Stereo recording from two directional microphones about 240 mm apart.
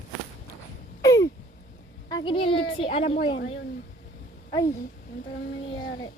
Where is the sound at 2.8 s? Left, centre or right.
Left.